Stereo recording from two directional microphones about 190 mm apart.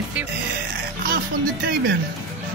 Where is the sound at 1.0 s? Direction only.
55° right (ahead or behind).